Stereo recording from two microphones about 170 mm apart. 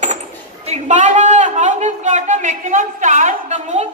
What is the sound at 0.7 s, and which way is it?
A man's voice, 45° right (ahead or behind).